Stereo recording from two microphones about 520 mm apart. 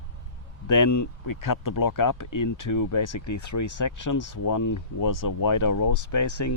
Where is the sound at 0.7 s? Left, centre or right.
Left.